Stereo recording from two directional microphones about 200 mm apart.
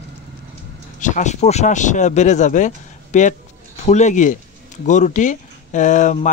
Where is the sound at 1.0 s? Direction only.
35° left (ahead or behind).